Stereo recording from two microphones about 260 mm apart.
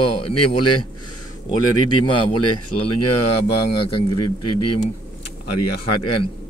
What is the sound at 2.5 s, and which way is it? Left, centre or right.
Speech, left.